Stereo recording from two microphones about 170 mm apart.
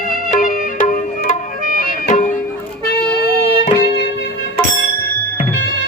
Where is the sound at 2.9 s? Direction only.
75° left (ahead or behind).